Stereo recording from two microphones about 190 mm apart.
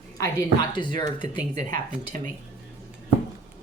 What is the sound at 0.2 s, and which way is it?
A woman's voice, 20° left (ahead or behind).